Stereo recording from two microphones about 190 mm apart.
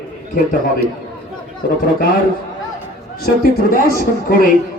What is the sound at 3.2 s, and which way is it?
Speech, 50° left (ahead or behind).